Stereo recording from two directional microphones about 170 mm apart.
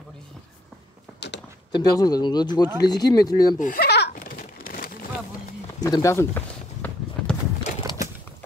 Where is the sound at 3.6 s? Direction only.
60° left (ahead or behind).